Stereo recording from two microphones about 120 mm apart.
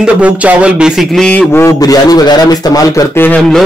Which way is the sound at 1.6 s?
30° left (ahead or behind).